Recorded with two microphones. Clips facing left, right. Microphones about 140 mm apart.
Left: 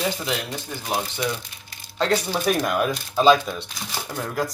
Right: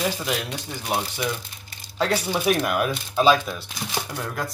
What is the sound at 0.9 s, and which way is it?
Speech, 5° right (ahead or behind).